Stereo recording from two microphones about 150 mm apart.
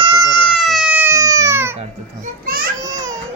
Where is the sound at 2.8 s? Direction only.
20° right (ahead or behind).